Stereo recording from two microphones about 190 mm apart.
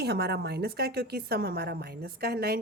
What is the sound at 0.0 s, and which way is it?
A woman's voice, 60° right (ahead or behind).